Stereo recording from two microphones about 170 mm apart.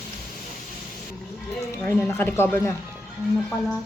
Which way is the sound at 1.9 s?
10° left (ahead or behind).